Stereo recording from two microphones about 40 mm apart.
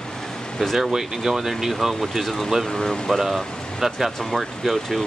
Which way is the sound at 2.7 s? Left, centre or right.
Centre.